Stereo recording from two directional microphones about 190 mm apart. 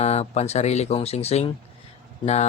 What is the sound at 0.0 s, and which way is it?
Speech, 35° left (ahead or behind).